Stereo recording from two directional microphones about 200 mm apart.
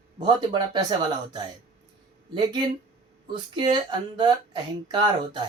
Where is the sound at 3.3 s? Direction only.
25° right (ahead or behind).